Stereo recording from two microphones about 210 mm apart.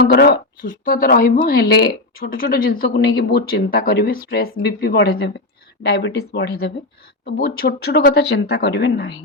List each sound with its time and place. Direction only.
0.0 s speech: 50° left (ahead or behind)